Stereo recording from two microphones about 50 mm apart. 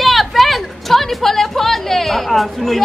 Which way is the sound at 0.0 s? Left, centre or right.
Centre.